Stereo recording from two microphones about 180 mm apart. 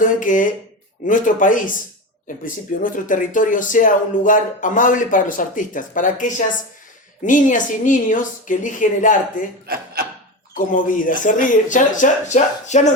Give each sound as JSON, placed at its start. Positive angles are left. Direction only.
{"t": 0.0, "sound": "speech", "side_deg": 45}
{"t": 9.6, "sound": "speech", "side_deg": -55}
{"t": 10.5, "sound": "speech", "side_deg": 50}